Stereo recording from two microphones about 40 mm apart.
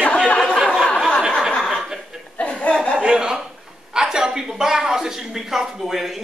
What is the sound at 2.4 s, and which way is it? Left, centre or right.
Chuckle, left.